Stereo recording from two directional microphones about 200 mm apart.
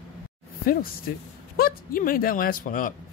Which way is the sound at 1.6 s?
45° left (ahead or behind).